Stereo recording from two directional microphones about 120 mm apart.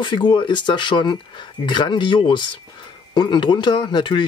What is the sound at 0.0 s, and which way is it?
Speech, 40° left (ahead or behind).